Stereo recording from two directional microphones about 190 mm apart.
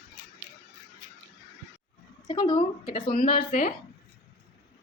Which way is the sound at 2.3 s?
20° left (ahead or behind).